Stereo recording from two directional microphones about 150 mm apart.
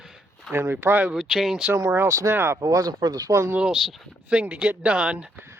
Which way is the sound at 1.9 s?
20° right (ahead or behind).